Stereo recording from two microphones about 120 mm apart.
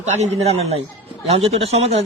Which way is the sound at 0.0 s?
70° right (ahead or behind).